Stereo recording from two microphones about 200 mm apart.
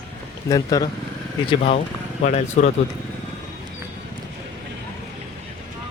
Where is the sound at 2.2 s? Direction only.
35° left (ahead or behind).